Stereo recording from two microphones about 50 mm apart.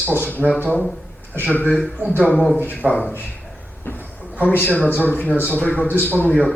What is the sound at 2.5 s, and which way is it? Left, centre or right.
Speech, left.